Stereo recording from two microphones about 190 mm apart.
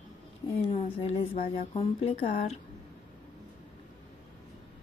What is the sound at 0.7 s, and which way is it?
Speech, 30° left (ahead or behind).